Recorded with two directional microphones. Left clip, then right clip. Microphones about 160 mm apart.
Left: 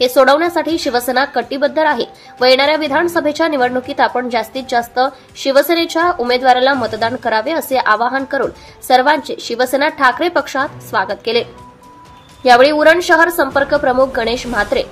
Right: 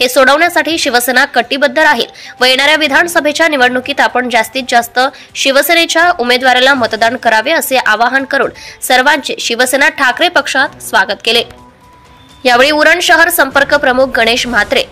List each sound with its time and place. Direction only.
0.0 s a woman's voice: 15° right (ahead or behind)
12.4 s a woman's voice: 20° right (ahead or behind)